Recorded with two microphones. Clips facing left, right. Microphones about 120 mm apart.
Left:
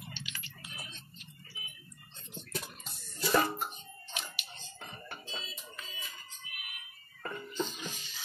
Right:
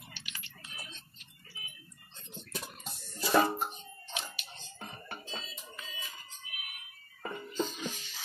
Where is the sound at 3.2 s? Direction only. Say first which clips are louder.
Right 2 dB; 20° right (ahead or behind).